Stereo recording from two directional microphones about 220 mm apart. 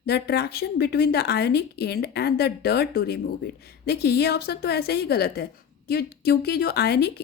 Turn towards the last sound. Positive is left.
turn(degrees=45)  # may be behind; listen again after turning